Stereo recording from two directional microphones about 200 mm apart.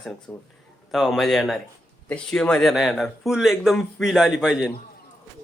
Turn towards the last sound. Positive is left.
turn(degrees=0)  # may be behind; listen again after turning